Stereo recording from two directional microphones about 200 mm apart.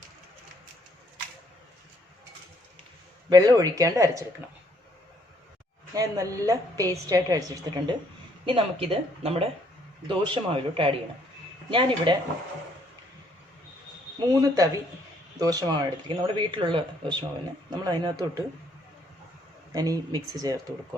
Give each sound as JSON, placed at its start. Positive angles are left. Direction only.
{"t": 3.2, "sound": "a woman's voice", "side_deg": -20}
{"t": 5.9, "sound": "a woman's voice", "side_deg": -15}
{"t": 14.3, "sound": "a woman's voice", "side_deg": -15}
{"t": 19.7, "sound": "a woman's voice", "side_deg": -15}